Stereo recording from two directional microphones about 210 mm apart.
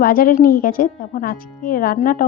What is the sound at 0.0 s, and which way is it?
Speech, 45° left (ahead or behind).